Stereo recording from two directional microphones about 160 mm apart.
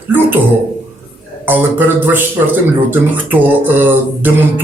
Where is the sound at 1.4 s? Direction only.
10° right (ahead or behind).